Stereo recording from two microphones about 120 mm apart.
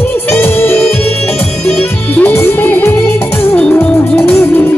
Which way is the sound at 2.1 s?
15° left (ahead or behind).